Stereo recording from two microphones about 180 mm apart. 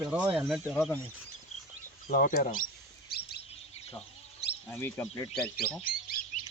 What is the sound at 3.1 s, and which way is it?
Bird, 60° left (ahead or behind).